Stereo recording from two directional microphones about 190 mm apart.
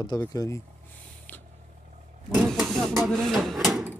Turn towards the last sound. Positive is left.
turn(degrees=0)  # may be behind; listen again after turning